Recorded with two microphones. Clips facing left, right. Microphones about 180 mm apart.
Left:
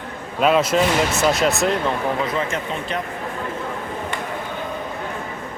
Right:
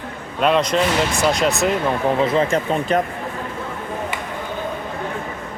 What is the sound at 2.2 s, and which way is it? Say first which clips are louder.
Speech: right 6 dB; 30° right (ahead or behind).